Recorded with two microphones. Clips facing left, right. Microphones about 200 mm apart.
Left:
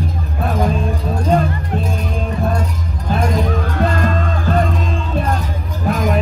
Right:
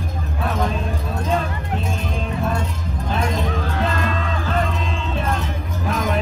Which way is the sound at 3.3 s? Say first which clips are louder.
Left 4 dB; 50° left (ahead or behind).